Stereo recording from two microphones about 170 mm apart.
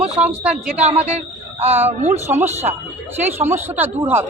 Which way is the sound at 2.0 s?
40° right (ahead or behind).